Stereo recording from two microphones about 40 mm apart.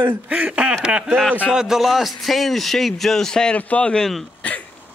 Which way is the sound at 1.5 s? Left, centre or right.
Centre.